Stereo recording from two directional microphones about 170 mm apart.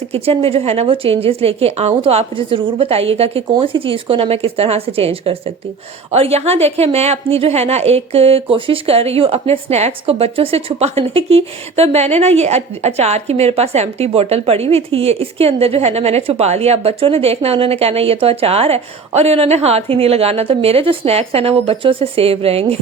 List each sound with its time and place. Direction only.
0.1 s a woman's voice: 35° right (ahead or behind)